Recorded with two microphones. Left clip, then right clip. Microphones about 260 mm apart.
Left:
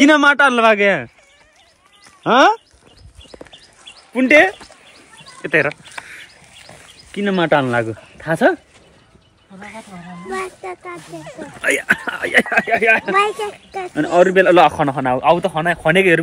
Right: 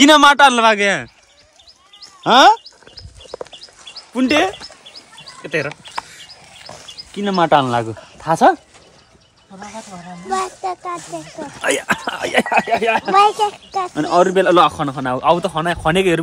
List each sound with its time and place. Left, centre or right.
0.0 s speech: centre
2.2 s speech: centre
4.1 s speech: centre
7.2 s speech: centre
9.5 s speech: right
10.3 s speech: right
13.9 s speech: centre